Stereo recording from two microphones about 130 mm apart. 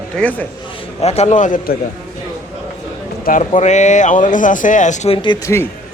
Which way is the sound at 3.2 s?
90° left.